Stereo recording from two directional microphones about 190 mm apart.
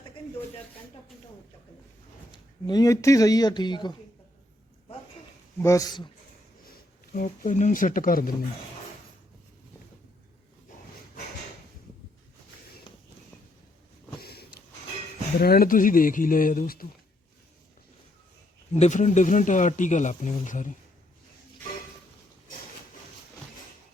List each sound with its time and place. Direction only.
2.3 s speech: 20° left (ahead or behind)
5.5 s speech: 15° left (ahead or behind)
6.7 s speech: 45° left (ahead or behind)
14.2 s a sound: 55° left (ahead or behind)
15.4 s speech: 50° left (ahead or behind)
18.7 s speech: 40° left (ahead or behind)